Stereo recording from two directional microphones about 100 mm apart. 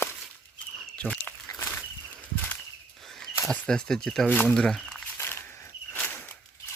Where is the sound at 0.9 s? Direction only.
10° left (ahead or behind).